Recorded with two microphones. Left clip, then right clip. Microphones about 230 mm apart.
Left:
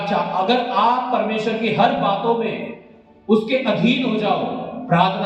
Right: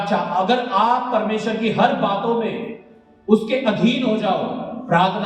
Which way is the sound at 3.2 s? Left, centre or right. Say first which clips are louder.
Even; right.